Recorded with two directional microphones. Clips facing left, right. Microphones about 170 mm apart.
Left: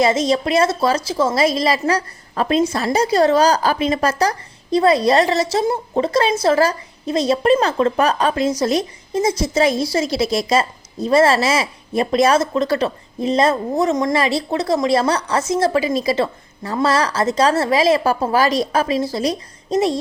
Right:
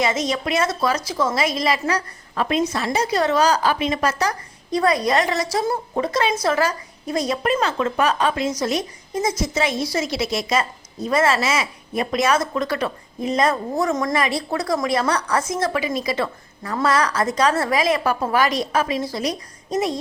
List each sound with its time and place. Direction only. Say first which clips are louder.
0.0 s a woman's voice: left 6 dB; 30° left (ahead or behind)